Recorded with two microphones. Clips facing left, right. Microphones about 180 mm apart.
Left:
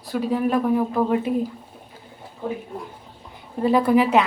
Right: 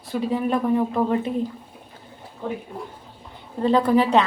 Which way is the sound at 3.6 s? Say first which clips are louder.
Left 1 dB; 10° left (ahead or behind).